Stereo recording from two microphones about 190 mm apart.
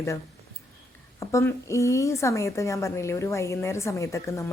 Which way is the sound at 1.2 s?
15° left (ahead or behind).